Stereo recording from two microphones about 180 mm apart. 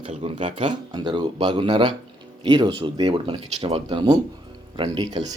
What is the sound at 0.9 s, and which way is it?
Speech, 25° right (ahead or behind).